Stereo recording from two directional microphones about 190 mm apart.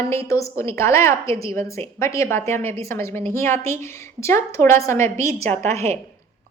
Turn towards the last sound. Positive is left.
turn(degrees=-35)  # may be behind; listen again after turning